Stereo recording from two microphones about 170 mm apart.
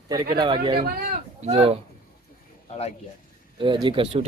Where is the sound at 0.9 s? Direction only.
65° right (ahead or behind).